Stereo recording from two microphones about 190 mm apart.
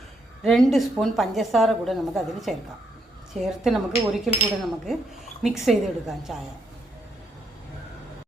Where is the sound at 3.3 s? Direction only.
35° right (ahead or behind).